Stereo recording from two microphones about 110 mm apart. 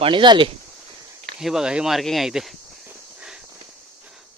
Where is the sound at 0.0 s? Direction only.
45° right (ahead or behind).